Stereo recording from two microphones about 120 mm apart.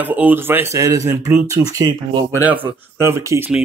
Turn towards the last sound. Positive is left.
turn(degrees=-25)  # may be behind; listen again after turning